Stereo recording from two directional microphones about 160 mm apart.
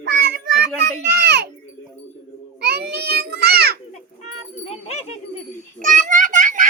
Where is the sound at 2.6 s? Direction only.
90° right.